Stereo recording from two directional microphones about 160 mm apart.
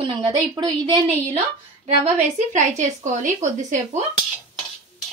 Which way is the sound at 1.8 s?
40° right (ahead or behind).